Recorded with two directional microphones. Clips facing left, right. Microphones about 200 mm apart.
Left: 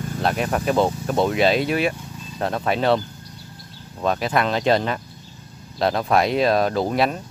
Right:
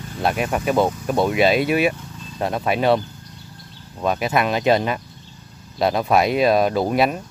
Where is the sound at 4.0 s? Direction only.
10° right (ahead or behind).